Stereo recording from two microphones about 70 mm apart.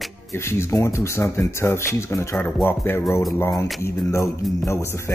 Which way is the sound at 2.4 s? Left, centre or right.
Left.